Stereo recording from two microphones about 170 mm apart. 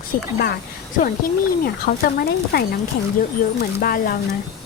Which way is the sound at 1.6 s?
60° left (ahead or behind).